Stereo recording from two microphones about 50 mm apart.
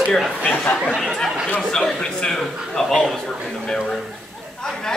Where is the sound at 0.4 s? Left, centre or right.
Left.